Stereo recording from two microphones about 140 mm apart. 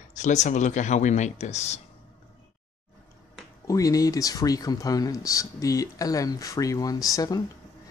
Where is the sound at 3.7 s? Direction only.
25° left (ahead or behind).